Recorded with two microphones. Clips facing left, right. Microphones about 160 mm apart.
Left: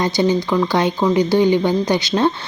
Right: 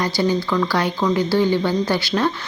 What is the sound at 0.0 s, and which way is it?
Speech, 20° left (ahead or behind).